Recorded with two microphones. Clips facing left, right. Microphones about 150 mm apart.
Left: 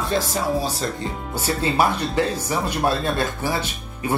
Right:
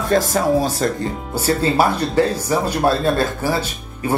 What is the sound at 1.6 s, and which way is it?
Speech, 35° right (ahead or behind).